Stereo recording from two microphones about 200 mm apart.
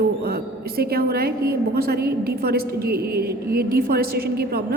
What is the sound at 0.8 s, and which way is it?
A woman's voice, 50° right (ahead or behind).